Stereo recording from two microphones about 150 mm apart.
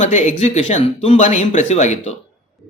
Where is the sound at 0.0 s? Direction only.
55° left (ahead or behind).